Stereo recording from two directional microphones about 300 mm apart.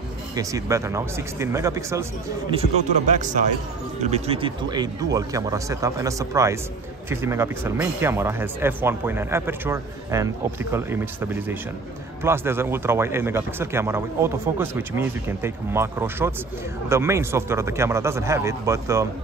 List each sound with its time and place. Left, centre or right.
0.4 s speech: centre
2.6 s speech: right